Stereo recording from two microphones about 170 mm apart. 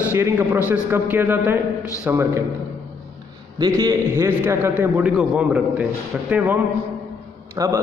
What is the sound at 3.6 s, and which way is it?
A man's voice, 20° right (ahead or behind).